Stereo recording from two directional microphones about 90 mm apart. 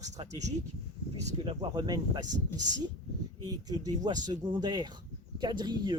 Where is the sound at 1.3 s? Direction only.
85° right.